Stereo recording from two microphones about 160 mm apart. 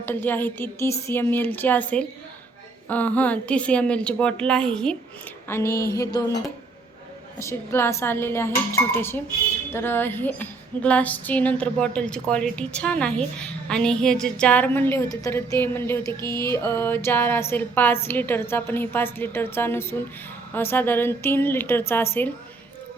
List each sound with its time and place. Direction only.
0.0 s speech: 10° left (ahead or behind)
2.9 s speech: 10° left (ahead or behind)
5.5 s a sound: 15° left (ahead or behind)
7.3 s speech: 15° left (ahead or behind)
16.2 s music: 25° right (ahead or behind)
16.5 s speech: 15° left (ahead or behind)